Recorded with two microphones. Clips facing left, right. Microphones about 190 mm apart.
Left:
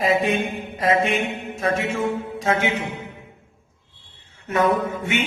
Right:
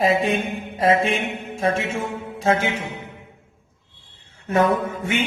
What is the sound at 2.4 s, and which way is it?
Music, 30° right (ahead or behind).